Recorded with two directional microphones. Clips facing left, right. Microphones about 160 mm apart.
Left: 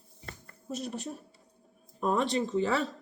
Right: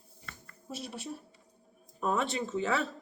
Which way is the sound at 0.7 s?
5° right (ahead or behind).